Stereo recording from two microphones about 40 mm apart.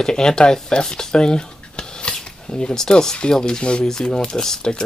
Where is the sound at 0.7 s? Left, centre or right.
Centre.